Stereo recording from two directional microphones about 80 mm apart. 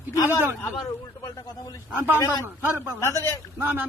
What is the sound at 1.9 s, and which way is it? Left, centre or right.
Speech, right.